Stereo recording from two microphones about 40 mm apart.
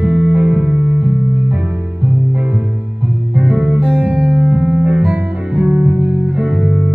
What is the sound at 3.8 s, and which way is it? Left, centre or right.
Music, right.